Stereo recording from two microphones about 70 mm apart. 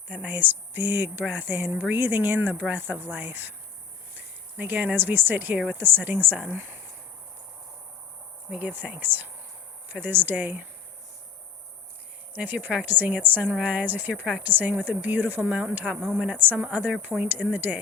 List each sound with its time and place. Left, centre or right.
0.1 s a woman's voice: right
4.5 s a woman's voice: right
8.5 s a woman's voice: right
12.3 s a woman's voice: right
16.0 s a woman's voice: centre
16.2 s a woman's voice: right